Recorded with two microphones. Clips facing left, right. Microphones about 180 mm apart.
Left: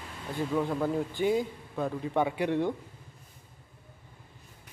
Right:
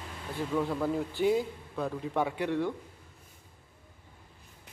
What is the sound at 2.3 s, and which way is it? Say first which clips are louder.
Speech: left 2 dB; 15° left (ahead or behind).